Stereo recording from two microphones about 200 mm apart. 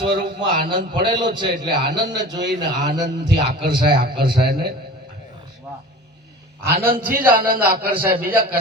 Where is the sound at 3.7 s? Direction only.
25° right (ahead or behind).